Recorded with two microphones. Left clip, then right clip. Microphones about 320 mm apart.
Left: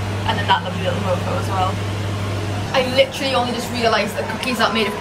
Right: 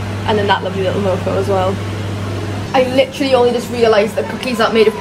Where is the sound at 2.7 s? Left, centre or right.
Centre.